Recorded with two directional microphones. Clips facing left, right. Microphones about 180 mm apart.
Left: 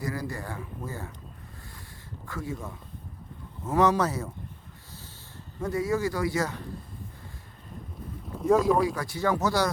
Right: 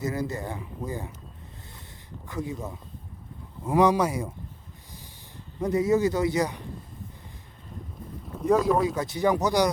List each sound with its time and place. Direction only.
0.0 s speech: 20° right (ahead or behind)
2.2 s speech: 20° right (ahead or behind)
5.5 s speech: 20° right (ahead or behind)
8.3 s speech: centre (ahead or behind)
9.0 s speech: 20° right (ahead or behind)